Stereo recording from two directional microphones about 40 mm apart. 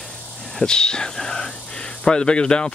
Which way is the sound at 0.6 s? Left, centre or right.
Centre.